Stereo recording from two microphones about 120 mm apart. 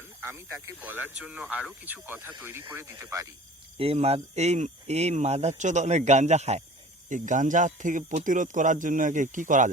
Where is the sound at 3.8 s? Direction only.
55° right (ahead or behind).